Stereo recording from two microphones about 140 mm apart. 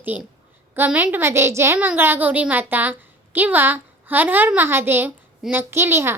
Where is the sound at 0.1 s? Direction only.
10° right (ahead or behind).